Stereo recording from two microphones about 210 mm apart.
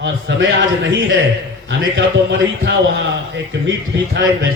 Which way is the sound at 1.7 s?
55° right (ahead or behind).